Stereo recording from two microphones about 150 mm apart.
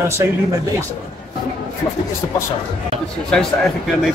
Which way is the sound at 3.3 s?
Centre (ahead or behind).